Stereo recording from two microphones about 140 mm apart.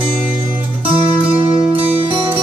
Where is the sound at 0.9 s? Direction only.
40° right (ahead or behind).